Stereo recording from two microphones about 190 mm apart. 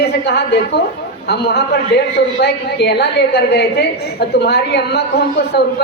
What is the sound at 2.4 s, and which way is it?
A woman's voice, 60° left (ahead or behind).